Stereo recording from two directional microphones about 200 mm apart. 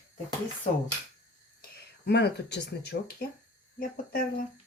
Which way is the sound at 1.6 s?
55° left (ahead or behind).